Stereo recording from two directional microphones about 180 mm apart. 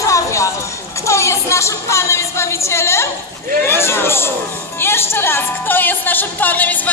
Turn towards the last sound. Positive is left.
turn(degrees=10)  # may be behind; listen again after turning